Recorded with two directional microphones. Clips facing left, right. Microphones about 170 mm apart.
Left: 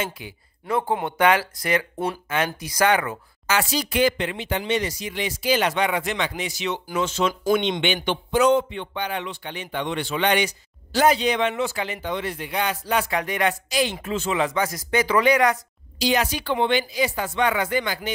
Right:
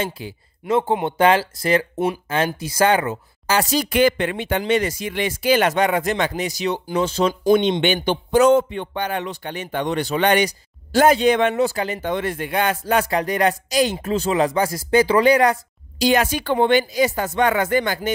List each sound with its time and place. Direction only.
0.0 s speech: 30° right (ahead or behind)
16.0 s speech: 50° right (ahead or behind)